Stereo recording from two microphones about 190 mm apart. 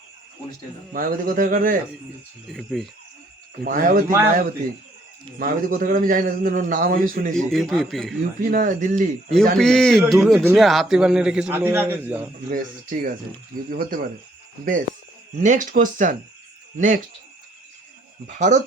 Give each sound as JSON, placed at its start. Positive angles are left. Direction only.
{"t": 0.9, "sound": "a man's voice", "side_deg": -45}
{"t": 2.5, "sound": "a man's voice", "side_deg": 0}
{"t": 3.6, "sound": "a man's voice", "side_deg": -45}
{"t": 5.4, "sound": "a man's voice", "side_deg": -50}
{"t": 7.3, "sound": "a man's voice", "side_deg": 0}
{"t": 8.4, "sound": "a man's voice", "side_deg": -45}
{"t": 9.6, "sound": "a man's voice", "side_deg": 5}
{"t": 12.5, "sound": "a man's voice", "side_deg": -45}
{"t": 15.4, "sound": "a man's voice", "side_deg": -40}
{"t": 18.3, "sound": "speech", "side_deg": -40}